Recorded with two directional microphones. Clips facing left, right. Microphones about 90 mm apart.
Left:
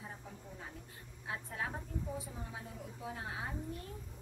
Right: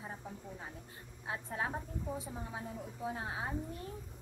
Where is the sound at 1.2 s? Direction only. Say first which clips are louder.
Right 3 dB; 25° right (ahead or behind).